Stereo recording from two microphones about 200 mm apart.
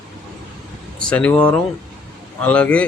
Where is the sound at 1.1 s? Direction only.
5° left (ahead or behind).